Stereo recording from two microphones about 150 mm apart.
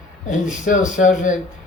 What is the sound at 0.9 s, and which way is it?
Speech, 60° left (ahead or behind).